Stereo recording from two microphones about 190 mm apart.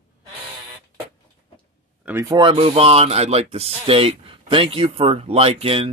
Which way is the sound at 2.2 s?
25° right (ahead or behind).